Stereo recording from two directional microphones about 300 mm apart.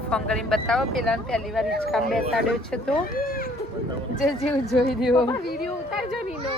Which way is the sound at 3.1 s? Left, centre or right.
Left.